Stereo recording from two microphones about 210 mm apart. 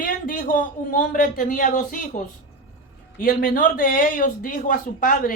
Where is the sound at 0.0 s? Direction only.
40° left (ahead or behind).